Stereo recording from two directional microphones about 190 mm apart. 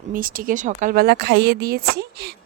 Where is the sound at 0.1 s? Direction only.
45° right (ahead or behind).